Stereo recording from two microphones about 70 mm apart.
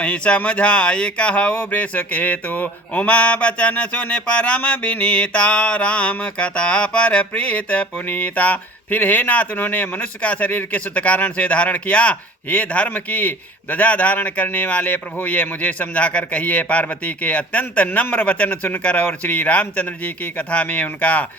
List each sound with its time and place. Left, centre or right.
0.0 s speech: centre